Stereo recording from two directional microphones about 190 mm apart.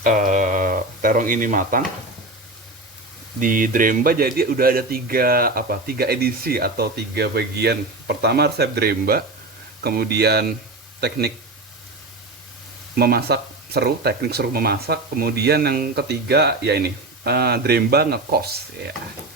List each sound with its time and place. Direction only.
0.0 s a sound: 45° right (ahead or behind)
3.4 s a man's voice: 45° right (ahead or behind)
13.0 s speech: 55° right (ahead or behind)